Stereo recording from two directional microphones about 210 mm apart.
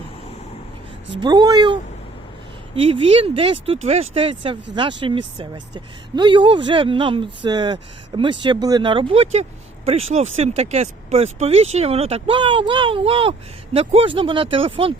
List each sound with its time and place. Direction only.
1.2 s speech: 20° right (ahead or behind)
2.8 s speech: 25° right (ahead or behind)